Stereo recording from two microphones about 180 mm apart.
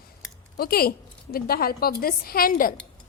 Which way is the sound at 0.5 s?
60° left (ahead or behind).